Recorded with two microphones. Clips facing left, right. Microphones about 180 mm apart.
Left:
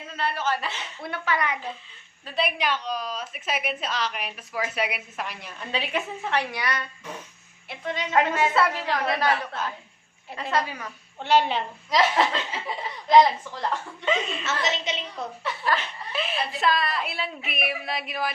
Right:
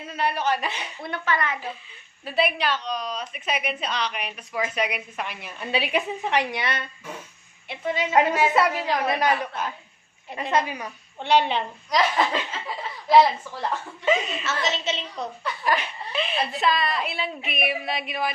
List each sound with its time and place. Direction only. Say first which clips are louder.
0.1 s a woman's voice: right 3 dB; 15° right (ahead or behind)
1.0 s a woman's voice: right 1 dB; 10° left (ahead or behind)
2.2 s a woman's voice: right 4 dB; 5° right (ahead or behind)
2.6 s a woman's voice: right 1 dB; 10° left (ahead or behind)
5.5 s a woman's voice: right 4 dB; 10° right (ahead or behind)
7.7 s a woman's voice: right 3 dB; 5° right (ahead or behind)
11.2 s a woman's voice: right 1 dB; 5° left (ahead or behind)
14.4 s a woman's voice: right 1 dB; 20° left (ahead or behind)
15.6 s a woman's voice: right 2 dB; 15° right (ahead or behind)
16.1 s a woman's voice: right 2 dB; centre (ahead or behind)